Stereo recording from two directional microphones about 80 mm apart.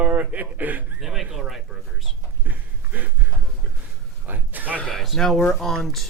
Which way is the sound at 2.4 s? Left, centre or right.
Right.